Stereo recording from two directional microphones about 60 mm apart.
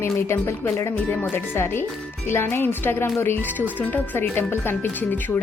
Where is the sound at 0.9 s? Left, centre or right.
Left.